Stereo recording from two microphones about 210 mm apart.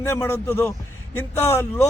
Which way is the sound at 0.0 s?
10° left (ahead or behind).